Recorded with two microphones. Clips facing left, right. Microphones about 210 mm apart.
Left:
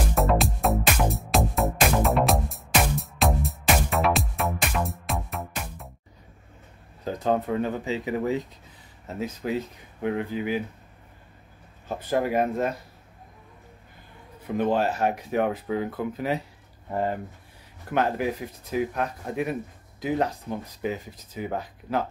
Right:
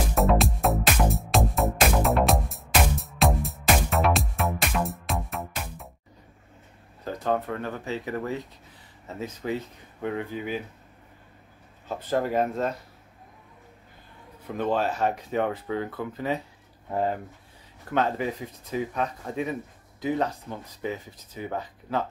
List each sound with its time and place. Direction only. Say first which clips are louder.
0.1 s music: right 1 dB; centre (ahead or behind)
7.1 s speech: left 2 dB; 15° left (ahead or behind)
11.9 s speech: left 1 dB; 10° left (ahead or behind)
14.6 s speech: left 2 dB; 10° left (ahead or behind)